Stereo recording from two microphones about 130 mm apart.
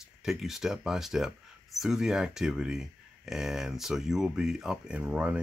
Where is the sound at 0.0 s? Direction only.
5° right (ahead or behind).